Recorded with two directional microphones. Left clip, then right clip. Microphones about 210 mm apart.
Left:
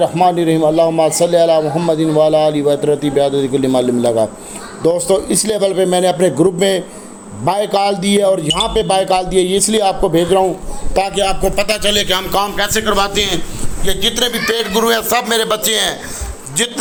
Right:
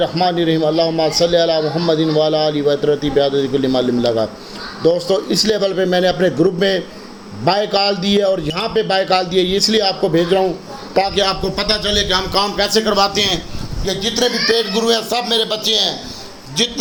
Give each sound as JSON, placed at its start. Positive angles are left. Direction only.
{"t": 0.0, "sound": "a man's voice", "side_deg": 15}
{"t": 10.9, "sound": "a man's voice", "side_deg": 25}
{"t": 12.9, "sound": "a man's voice", "side_deg": -5}
{"t": 14.2, "sound": "a man's voice", "side_deg": 20}
{"t": 14.7, "sound": "a man's voice", "side_deg": 10}